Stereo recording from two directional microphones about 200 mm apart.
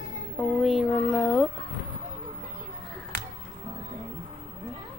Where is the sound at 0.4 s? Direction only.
Centre (ahead or behind).